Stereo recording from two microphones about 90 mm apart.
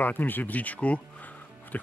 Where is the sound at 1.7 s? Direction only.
20° left (ahead or behind).